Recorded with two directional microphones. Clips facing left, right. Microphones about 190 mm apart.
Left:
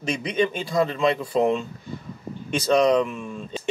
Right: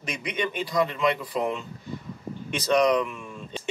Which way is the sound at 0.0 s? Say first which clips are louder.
Left 7 dB; 30° left (ahead or behind).